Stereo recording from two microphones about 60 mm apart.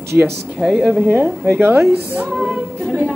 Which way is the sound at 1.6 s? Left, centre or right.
Right.